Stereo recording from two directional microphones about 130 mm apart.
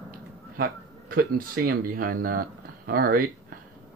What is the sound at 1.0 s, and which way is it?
Speech, 90° right.